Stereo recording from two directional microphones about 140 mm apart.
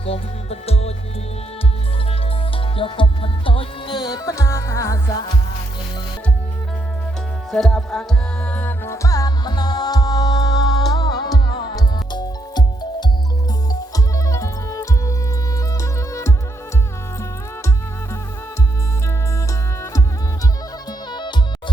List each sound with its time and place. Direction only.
0.0 s music: 45° left (ahead or behind)
2.7 s music: 40° left (ahead or behind)
7.5 s music: centre (ahead or behind); by 16.3 s 20° left (ahead or behind)
21.1 s music: 30° left (ahead or behind)